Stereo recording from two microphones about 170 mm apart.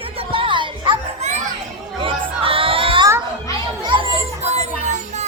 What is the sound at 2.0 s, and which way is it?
Chatter, 30° right (ahead or behind).